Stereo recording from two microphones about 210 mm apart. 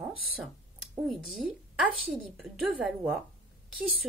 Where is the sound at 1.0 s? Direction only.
Centre (ahead or behind).